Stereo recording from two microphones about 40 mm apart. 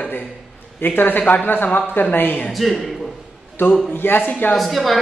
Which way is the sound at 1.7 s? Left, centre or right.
Left.